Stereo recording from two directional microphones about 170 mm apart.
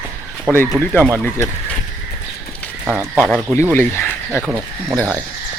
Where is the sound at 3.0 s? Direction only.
10° right (ahead or behind).